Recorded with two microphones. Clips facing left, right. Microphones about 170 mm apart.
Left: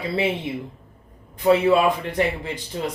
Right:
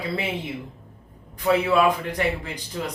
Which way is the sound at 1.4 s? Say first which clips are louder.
Left 3 dB; 25° left (ahead or behind).